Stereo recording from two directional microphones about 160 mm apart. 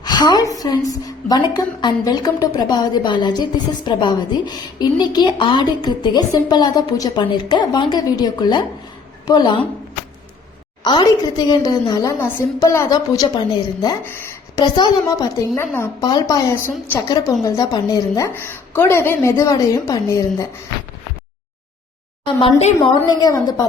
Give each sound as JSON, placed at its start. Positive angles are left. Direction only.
{"t": 0.0, "sound": "a woman's voice", "side_deg": 25}
{"t": 10.8, "sound": "a woman's voice", "side_deg": 25}
{"t": 15.5, "sound": "a woman's voice", "side_deg": 15}
{"t": 23.0, "sound": "a woman's voice", "side_deg": 25}